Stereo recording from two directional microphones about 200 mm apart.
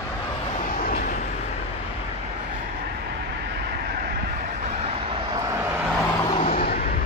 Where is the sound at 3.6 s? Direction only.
50° right (ahead or behind).